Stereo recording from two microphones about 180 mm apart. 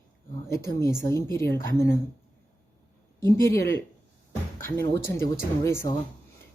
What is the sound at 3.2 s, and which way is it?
Speech, 15° left (ahead or behind).